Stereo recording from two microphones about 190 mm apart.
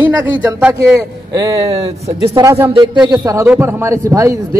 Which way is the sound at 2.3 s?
15° right (ahead or behind).